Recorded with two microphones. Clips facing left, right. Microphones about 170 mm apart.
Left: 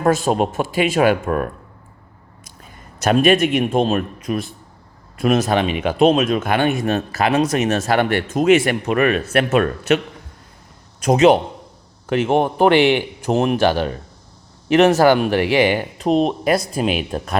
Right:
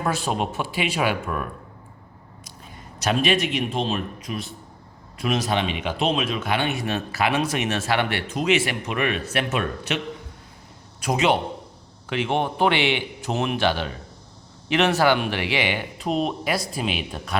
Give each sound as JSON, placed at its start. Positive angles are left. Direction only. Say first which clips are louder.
{"t": 0.0, "sound": "speech", "louder": "left 8 dB", "side_deg": 45}
{"t": 3.0, "sound": "speech", "louder": "left 7 dB", "side_deg": 50}
{"t": 11.0, "sound": "speech", "louder": "left 8 dB", "side_deg": 45}